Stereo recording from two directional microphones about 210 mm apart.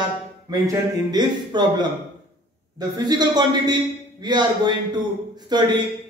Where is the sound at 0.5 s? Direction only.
20° right (ahead or behind).